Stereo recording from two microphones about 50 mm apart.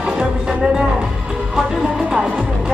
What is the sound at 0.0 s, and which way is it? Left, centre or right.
Music, centre.